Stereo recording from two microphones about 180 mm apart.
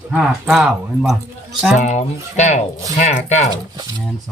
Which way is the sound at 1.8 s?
40° left (ahead or behind).